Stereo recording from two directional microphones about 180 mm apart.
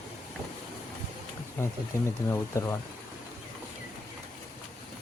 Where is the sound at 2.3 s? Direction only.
15° left (ahead or behind).